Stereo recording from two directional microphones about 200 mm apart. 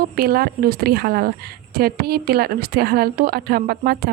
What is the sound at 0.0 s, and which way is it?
A woman's voice, 50° right (ahead or behind).